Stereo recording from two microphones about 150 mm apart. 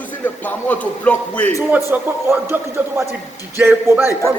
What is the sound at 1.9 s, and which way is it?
Speech, 10° right (ahead or behind).